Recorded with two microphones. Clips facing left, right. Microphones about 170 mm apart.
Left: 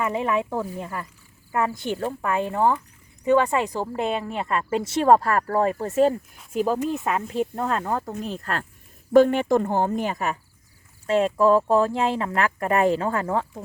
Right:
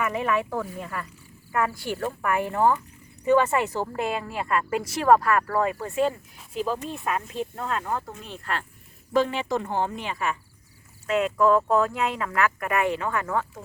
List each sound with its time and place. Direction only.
0.0 s a woman's voice: 25° left (ahead or behind); by 8.6 s 40° left (ahead or behind)
9.1 s speech: 50° left (ahead or behind)
11.0 s speech: 30° left (ahead or behind)